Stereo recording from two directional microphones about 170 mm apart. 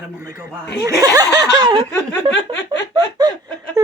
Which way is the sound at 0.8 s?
20° right (ahead or behind).